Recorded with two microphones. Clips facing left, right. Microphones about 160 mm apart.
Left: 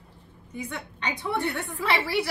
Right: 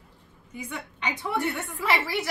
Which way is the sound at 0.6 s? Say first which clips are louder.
Left 1 dB; 10° right (ahead or behind).